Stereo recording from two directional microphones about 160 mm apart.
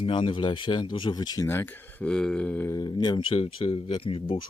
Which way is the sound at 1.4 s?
15° left (ahead or behind).